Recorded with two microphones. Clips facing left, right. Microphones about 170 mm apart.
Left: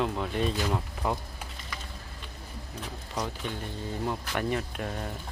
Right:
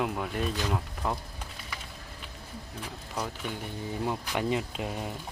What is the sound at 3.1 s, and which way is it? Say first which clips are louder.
Speech: left 1 dB; 5° right (ahead or behind).